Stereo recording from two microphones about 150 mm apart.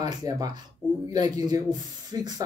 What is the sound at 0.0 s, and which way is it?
Speech, 25° right (ahead or behind).